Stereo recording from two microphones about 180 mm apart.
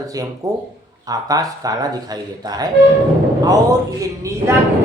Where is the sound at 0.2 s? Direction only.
20° right (ahead or behind).